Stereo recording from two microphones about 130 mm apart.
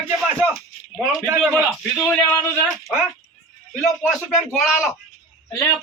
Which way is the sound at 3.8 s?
5° right (ahead or behind).